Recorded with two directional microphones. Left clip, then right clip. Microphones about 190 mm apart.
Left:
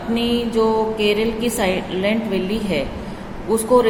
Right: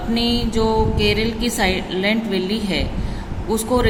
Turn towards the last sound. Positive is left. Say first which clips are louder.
# left 4 dB
turn(degrees=-20)  # may be behind; listen again after turning